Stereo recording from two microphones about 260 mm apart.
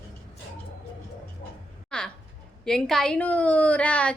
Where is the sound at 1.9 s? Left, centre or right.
Centre.